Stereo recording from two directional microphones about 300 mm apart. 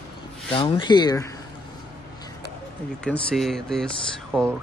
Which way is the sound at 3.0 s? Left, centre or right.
Centre.